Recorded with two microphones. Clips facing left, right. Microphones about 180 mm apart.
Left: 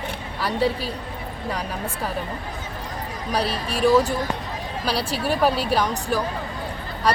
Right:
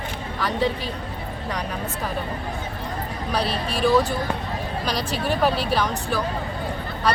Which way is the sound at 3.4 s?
40° left (ahead or behind).